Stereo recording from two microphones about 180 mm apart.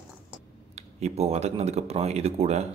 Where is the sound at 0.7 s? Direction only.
35° right (ahead or behind).